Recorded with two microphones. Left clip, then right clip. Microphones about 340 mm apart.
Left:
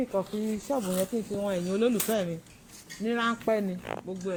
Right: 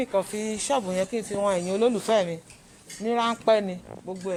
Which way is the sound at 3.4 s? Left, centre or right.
Right.